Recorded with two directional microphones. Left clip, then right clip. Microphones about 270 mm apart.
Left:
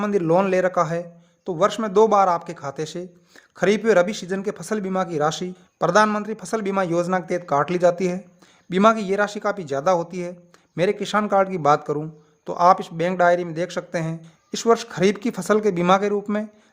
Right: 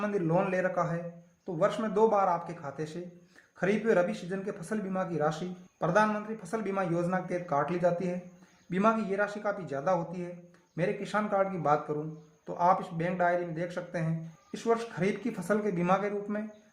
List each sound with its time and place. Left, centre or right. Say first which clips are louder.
0.0 s a man's voice: left 10 dB; left